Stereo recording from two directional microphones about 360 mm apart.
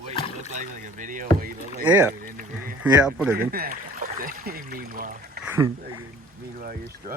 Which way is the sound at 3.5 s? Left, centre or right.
Right.